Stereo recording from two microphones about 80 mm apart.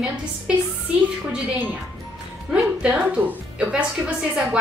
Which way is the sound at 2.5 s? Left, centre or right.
Centre.